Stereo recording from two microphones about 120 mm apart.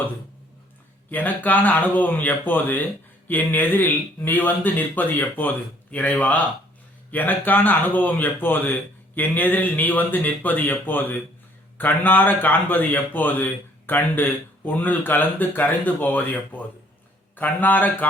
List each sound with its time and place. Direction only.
1.1 s a man's voice: 15° left (ahead or behind)